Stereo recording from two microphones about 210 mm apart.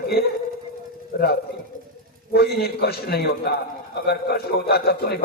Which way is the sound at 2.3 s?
50° left (ahead or behind).